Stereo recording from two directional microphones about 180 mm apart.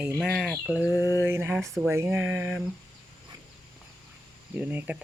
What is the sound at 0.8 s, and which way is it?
Mantra, 20° left (ahead or behind).